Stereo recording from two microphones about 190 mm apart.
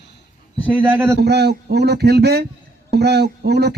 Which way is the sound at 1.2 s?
60° right (ahead or behind).